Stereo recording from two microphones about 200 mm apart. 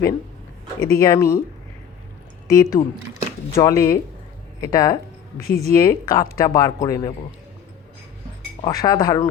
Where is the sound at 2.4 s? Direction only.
15° left (ahead or behind).